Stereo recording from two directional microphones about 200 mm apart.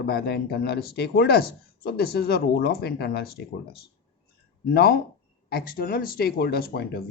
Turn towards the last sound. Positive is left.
turn(degrees=50)  # may be behind; listen again after turning